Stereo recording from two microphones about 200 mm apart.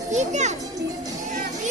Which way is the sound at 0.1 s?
35° right (ahead or behind).